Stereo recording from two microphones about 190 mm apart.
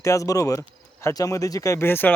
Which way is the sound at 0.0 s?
15° left (ahead or behind).